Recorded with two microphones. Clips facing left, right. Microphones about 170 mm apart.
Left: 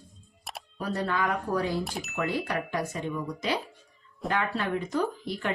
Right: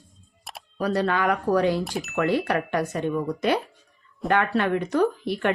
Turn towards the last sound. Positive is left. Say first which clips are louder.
# right 7 dB
turn(degrees=-65)  # may be behind; listen again after turning